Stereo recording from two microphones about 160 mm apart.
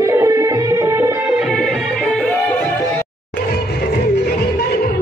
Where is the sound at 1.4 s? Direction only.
Centre (ahead or behind).